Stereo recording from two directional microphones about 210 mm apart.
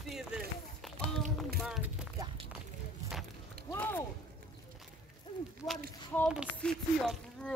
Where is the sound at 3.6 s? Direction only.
15° left (ahead or behind).